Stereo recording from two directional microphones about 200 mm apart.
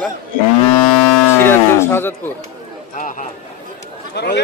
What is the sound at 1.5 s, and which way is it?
Speech, 10° left (ahead or behind).